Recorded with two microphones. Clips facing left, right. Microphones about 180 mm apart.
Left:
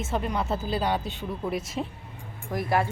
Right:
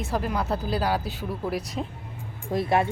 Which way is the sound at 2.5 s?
25° right (ahead or behind).